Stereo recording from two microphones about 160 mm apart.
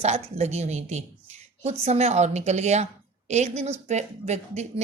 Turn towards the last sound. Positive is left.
turn(degrees=-45)  # may be behind; listen again after turning